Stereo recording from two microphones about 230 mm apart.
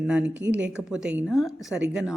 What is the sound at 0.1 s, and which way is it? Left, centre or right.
Speech, centre.